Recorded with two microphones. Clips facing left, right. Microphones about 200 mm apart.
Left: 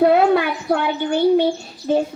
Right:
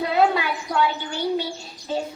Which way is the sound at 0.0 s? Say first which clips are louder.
Left 7 dB; 55° left (ahead or behind).